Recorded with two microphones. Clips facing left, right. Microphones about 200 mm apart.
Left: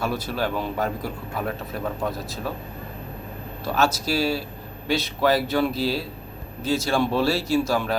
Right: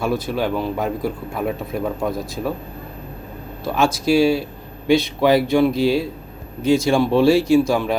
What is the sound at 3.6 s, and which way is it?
Speech, 10° right (ahead or behind).